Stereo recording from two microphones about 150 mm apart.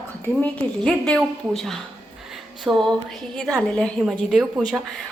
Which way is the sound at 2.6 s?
Centre (ahead or behind).